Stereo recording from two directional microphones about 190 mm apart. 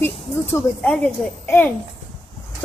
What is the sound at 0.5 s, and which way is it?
A woman's voice, 10° left (ahead or behind).